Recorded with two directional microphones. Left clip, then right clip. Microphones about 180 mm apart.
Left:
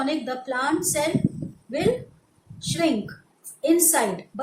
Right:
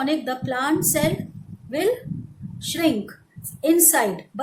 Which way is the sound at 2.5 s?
50° right (ahead or behind).